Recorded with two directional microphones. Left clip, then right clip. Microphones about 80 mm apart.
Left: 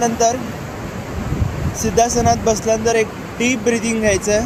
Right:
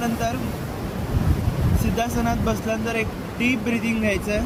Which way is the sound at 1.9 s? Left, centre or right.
Right.